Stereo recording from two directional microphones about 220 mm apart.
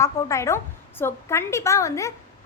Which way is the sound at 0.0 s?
15° left (ahead or behind).